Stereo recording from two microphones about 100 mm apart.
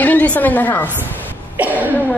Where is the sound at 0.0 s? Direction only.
15° left (ahead or behind).